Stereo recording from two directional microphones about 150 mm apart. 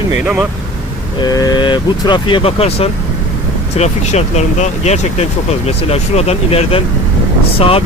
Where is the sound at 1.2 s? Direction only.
25° left (ahead or behind).